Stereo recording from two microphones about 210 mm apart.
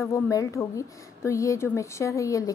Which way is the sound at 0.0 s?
15° left (ahead or behind).